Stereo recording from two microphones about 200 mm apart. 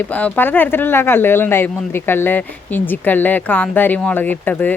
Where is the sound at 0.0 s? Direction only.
5° left (ahead or behind).